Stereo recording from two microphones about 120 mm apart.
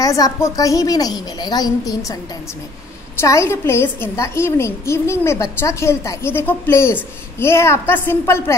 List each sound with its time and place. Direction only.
0.0 s a child's voice: 30° left (ahead or behind)
3.2 s a woman's voice: 25° left (ahead or behind)